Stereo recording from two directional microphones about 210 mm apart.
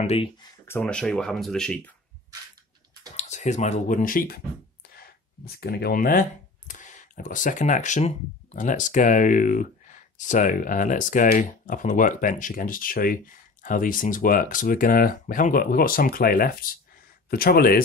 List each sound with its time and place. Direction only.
0.0 s speech: 25° left (ahead or behind)
0.7 s speech: 10° left (ahead or behind)
3.2 s speech: 35° left (ahead or behind)
5.4 s speech: 50° left (ahead or behind)